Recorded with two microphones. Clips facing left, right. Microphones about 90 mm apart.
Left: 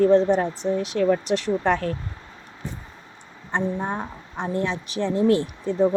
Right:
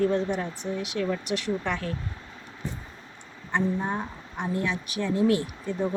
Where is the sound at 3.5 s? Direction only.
30° left (ahead or behind).